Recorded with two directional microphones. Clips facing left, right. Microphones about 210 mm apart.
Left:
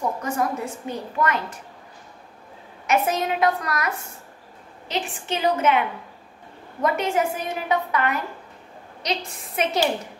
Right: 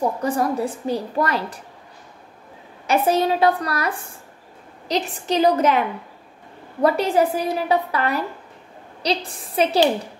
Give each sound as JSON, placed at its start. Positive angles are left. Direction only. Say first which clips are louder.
{"t": 0.2, "sound": "a woman's voice", "louder": "right 4 dB", "side_deg": -35}
{"t": 2.9, "sound": "a woman's voice", "louder": "right 4 dB", "side_deg": -30}